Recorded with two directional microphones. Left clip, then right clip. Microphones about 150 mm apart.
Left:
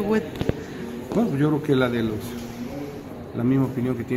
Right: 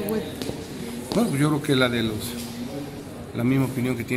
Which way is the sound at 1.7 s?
15° left (ahead or behind).